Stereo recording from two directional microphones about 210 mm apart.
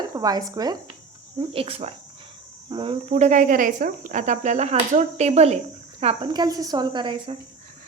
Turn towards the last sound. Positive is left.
turn(degrees=-20)  # may be behind; listen again after turning